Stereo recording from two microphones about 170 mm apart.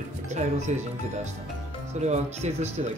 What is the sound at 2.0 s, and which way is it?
Speech, 40° right (ahead or behind).